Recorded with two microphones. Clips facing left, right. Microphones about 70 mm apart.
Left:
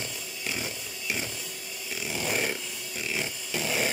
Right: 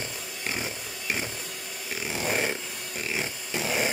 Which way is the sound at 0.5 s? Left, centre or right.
Right.